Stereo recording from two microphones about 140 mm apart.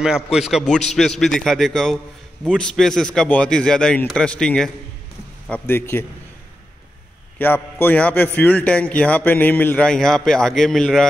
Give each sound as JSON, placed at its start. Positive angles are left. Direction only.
{"t": 0.0, "sound": "a man's voice", "side_deg": -5}
{"t": 7.3, "sound": "a man's voice", "side_deg": 15}